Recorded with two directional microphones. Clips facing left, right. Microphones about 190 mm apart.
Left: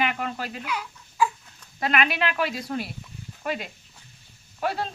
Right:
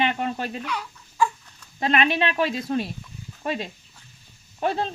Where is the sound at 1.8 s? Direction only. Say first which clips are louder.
Right 3 dB; 25° right (ahead or behind).